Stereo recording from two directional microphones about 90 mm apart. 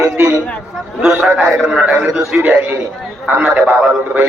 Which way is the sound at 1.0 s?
15° right (ahead or behind).